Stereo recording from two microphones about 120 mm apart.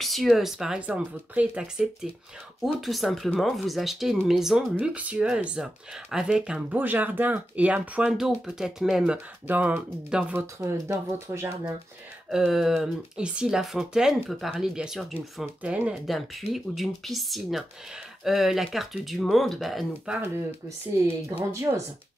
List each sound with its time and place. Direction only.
0.0 s speech: centre (ahead or behind)
10.4 s speech: 25° right (ahead or behind)
12.3 s speech: 5° right (ahead or behind)
16.1 s speech: centre (ahead or behind)
20.2 s speech: 20° right (ahead or behind)